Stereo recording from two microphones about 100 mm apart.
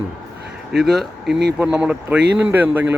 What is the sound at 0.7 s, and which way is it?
Speech, 5° right (ahead or behind).